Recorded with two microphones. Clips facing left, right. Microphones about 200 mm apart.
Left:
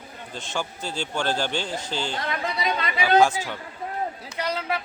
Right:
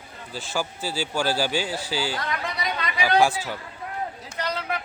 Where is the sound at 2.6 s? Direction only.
25° left (ahead or behind).